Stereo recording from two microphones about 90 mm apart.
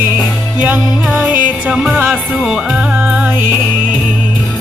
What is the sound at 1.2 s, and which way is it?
Music, 10° right (ahead or behind).